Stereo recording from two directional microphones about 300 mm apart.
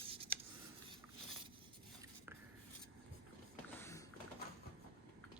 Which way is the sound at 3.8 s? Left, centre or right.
Centre.